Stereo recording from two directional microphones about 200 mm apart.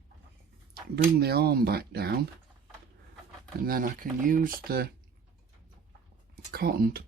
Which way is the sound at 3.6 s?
45° right (ahead or behind).